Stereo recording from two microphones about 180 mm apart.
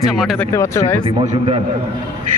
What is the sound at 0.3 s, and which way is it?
Speech, 15° left (ahead or behind).